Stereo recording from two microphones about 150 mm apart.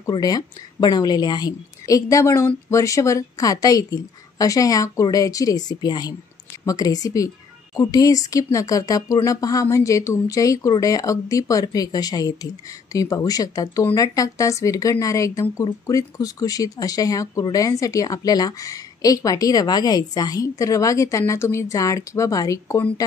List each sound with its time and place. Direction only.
0.1 s speech: 25° left (ahead or behind)